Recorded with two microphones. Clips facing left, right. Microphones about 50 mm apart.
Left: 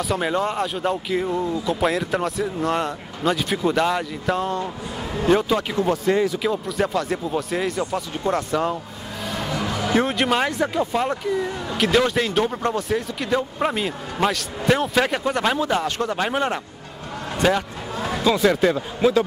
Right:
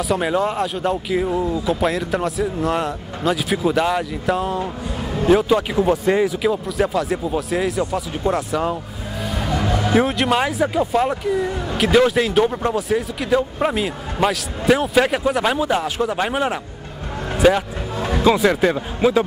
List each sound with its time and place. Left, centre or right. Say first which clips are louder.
0.0 s a man's voice: right 3 dB; centre
9.6 s music: right 3 dB; centre
10.0 s a man's voice: right 2 dB; centre